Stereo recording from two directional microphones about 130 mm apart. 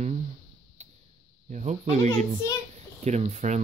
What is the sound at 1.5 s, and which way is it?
Speech, 65° right (ahead or behind).